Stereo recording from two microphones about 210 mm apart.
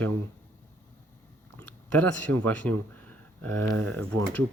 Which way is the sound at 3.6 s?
80° right.